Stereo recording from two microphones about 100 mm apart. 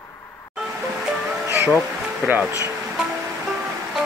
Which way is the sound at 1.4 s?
25° right (ahead or behind).